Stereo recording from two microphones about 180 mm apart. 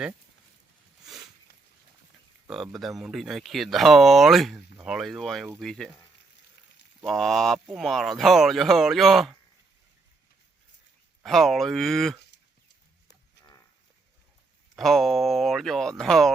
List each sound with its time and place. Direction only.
2.5 s speech: centre (ahead or behind)
7.0 s speech: centre (ahead or behind)
11.2 s speech: centre (ahead or behind)
13.1 s cattle: 20° left (ahead or behind)
14.8 s speech: centre (ahead or behind)